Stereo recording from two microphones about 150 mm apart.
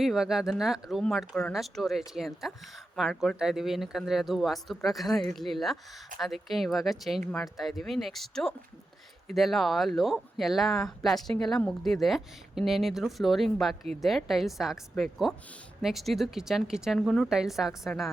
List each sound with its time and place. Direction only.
0.0 s speech: centre (ahead or behind)